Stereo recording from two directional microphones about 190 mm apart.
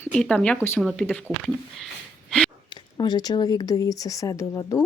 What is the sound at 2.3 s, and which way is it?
Sigh, 5° left (ahead or behind).